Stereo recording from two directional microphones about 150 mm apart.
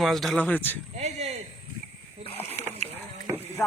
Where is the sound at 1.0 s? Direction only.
45° right (ahead or behind).